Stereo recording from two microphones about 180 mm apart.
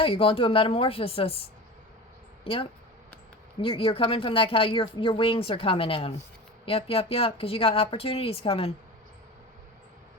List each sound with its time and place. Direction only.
0.0 s speech: 30° left (ahead or behind)